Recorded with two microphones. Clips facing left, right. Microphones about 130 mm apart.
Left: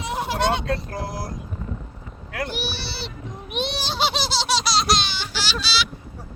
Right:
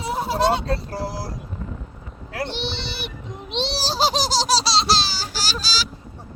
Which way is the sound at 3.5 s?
30° right (ahead or behind).